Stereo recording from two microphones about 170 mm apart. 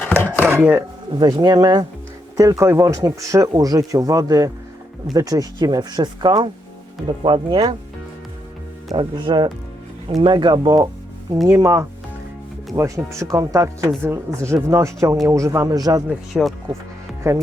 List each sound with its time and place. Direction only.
0.3 s chopping: 10° right (ahead or behind)
1.1 s speech: 25° right (ahead or behind)
9.0 s speech: 25° right (ahead or behind)
11.4 s chopping: 15° right (ahead or behind)
12.7 s speech: 15° right (ahead or behind)
16.0 s speech: centre (ahead or behind)
17.2 s chopping: 15° right (ahead or behind)